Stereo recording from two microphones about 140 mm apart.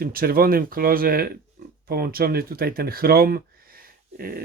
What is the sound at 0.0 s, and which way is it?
Speech, 90° right.